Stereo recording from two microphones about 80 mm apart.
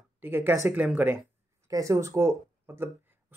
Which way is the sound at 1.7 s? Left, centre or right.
Right.